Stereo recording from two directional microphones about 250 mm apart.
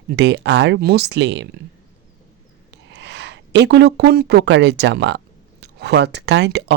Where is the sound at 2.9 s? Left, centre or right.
Right.